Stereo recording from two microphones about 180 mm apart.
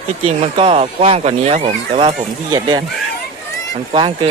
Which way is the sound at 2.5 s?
25° right (ahead or behind).